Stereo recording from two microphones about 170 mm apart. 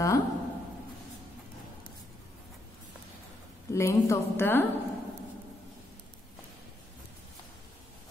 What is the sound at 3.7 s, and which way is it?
Speech, 15° left (ahead or behind).